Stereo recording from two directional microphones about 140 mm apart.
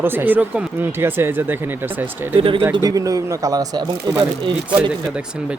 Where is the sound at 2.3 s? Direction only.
40° right (ahead or behind).